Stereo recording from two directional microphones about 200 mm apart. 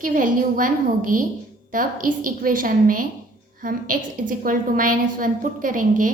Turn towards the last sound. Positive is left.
turn(degrees=-40)  # may be behind; listen again after turning